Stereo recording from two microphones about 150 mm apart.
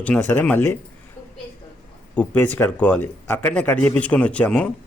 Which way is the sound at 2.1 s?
10° left (ahead or behind).